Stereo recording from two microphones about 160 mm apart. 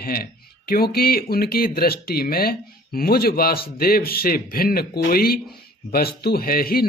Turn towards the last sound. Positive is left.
turn(degrees=70)  # may be behind; listen again after turning